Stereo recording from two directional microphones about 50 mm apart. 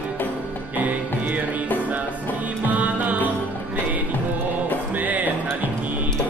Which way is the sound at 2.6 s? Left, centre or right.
Right.